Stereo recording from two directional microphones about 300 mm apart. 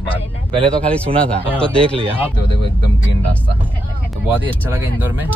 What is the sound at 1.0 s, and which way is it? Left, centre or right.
Speech, centre.